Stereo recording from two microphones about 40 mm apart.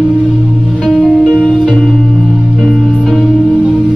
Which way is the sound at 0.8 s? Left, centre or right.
Centre.